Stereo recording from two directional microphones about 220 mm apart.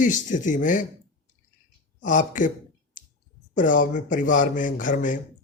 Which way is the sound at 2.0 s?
35° left (ahead or behind).